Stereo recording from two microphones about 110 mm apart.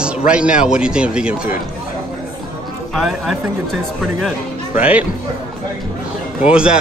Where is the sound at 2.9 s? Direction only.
Centre (ahead or behind).